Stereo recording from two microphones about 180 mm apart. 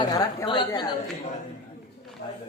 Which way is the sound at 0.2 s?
25° left (ahead or behind).